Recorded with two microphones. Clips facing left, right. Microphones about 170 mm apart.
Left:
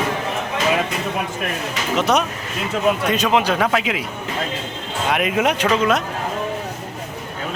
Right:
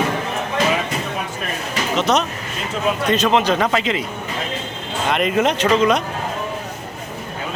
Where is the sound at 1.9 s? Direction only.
10° left (ahead or behind).